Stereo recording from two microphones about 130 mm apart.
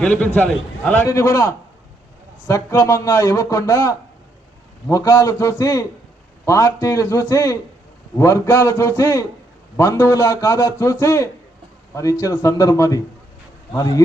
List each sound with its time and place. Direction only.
0.0 s a man's voice: 10° left (ahead or behind)
1.0 s a man's voice: 25° left (ahead or behind)